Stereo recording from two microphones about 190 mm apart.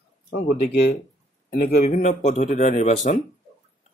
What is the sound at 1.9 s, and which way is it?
A man's voice, 35° left (ahead or behind).